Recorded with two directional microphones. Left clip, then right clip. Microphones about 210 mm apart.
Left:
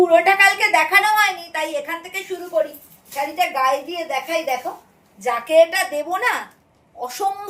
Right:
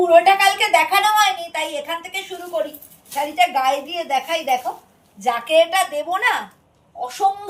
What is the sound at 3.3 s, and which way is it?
A woman's voice, 5° left (ahead or behind).